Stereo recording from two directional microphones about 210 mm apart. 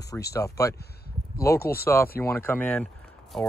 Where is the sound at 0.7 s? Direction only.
50° left (ahead or behind).